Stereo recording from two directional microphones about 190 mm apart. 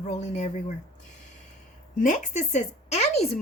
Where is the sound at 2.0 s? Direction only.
40° left (ahead or behind).